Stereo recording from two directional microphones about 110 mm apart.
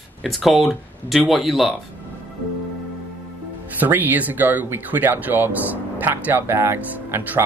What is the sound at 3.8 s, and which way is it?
Speech, 15° right (ahead or behind).